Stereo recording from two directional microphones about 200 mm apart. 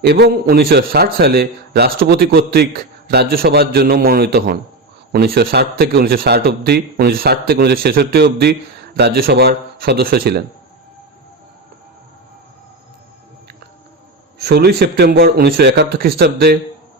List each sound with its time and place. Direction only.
0.0 s a man's voice: 50° right (ahead or behind)
14.3 s a man's voice: 55° right (ahead or behind)